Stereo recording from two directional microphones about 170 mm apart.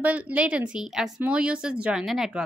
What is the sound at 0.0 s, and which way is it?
A woman's voice, 10° right (ahead or behind).